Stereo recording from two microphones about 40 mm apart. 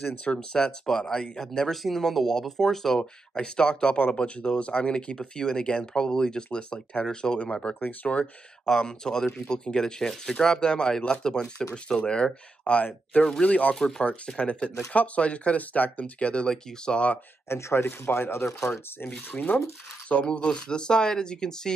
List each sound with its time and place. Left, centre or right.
0.0 s speech: left
1.7 s speech: centre
3.0 s speech: left
7.8 s speech: left
8.6 s speech: centre
12.6 s speech: left
13.7 s speech: centre
14.9 s speech: left
16.4 s speech: centre
17.5 s speech: left
19.3 s speech: left
20.2 s speech: left